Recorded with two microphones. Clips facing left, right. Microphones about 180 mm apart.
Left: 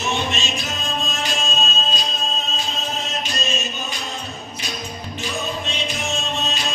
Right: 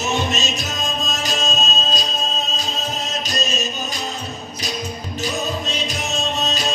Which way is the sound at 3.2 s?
40° right (ahead or behind).